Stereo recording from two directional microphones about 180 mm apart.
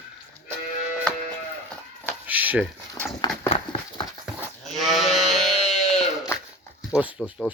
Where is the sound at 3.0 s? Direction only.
15° left (ahead or behind).